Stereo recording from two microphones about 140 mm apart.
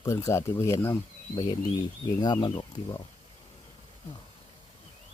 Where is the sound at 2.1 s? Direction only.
30° left (ahead or behind).